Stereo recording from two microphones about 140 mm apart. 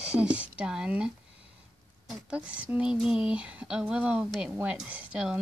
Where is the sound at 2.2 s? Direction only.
10° right (ahead or behind).